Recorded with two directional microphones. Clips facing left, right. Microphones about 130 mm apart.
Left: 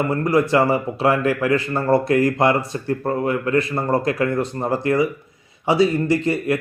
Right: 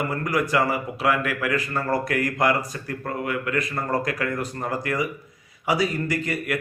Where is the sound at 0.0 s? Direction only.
30° left (ahead or behind).